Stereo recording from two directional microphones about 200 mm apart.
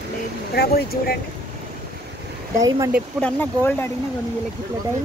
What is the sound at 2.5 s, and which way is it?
Speech, 15° right (ahead or behind).